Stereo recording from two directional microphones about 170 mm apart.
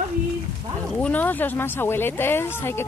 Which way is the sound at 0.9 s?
10° left (ahead or behind).